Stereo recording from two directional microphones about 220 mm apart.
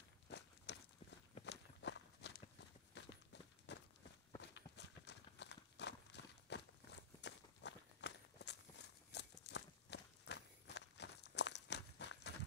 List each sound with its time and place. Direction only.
0.7 s walk: 50° left (ahead or behind)
2.9 s clip-clop: 50° left (ahead or behind)
3.7 s walk: 50° left (ahead or behind)
4.4 s horse: 50° left (ahead or behind)
7.2 s walk: 50° left (ahead or behind)